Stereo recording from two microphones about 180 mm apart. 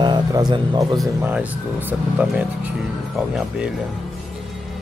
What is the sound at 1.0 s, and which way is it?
Speech, 10° right (ahead or behind).